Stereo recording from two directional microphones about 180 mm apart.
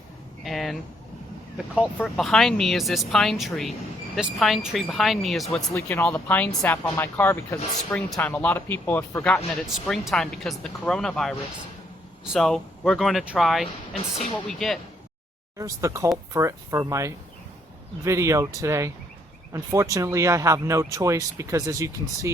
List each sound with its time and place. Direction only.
0.4 s a woman's voice: centre (ahead or behind)
2.0 s a woman's voice: centre (ahead or behind)
15.5 s speech: 15° right (ahead or behind)